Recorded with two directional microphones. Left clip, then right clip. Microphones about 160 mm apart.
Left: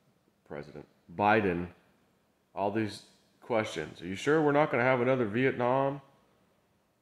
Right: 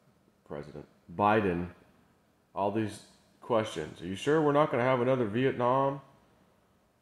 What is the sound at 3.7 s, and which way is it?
Speech, 15° left (ahead or behind).